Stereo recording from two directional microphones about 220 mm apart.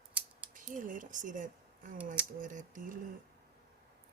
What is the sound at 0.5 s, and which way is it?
Speech, 35° right (ahead or behind).